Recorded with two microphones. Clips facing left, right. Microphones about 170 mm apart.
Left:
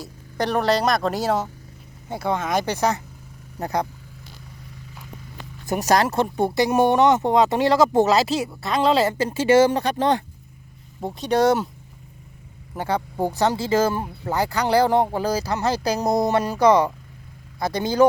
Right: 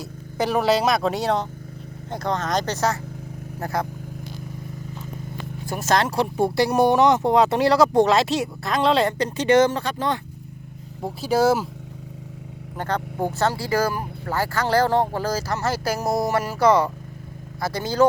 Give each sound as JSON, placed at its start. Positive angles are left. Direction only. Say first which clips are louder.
{"t": 0.0, "sound": "speech", "louder": "right 1 dB", "side_deg": -5}
{"t": 5.6, "sound": "speech", "louder": "left 2 dB", "side_deg": 15}
{"t": 11.0, "sound": "speech", "louder": "even", "side_deg": -5}
{"t": 12.7, "sound": "speech", "louder": "left 2 dB", "side_deg": 10}